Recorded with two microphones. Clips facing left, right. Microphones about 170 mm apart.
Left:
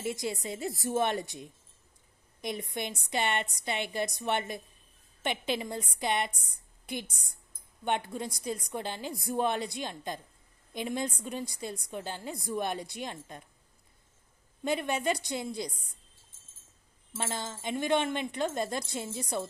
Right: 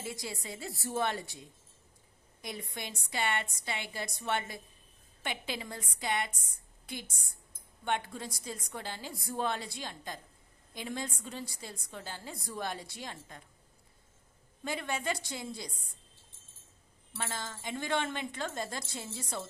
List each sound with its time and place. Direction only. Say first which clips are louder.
0.0 s a woman's voice: left 7 dB; 20° left (ahead or behind)
14.6 s a woman's voice: left 6 dB; 20° left (ahead or behind)
17.2 s a woman's voice: left 4 dB; 20° left (ahead or behind)